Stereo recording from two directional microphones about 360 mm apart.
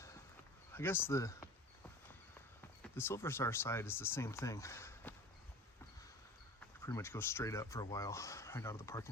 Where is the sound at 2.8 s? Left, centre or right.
Centre.